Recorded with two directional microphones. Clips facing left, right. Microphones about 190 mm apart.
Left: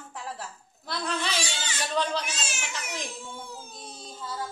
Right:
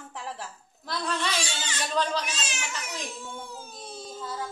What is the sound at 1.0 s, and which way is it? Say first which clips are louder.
Speech: even; 10° left (ahead or behind).